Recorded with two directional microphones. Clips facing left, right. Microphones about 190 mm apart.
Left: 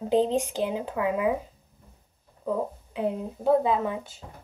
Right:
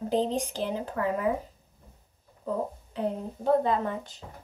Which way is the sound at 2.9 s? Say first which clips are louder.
Left 2 dB; 5° left (ahead or behind).